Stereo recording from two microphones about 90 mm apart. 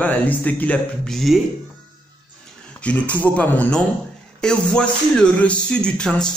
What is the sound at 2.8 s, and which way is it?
Speech, 15° left (ahead or behind).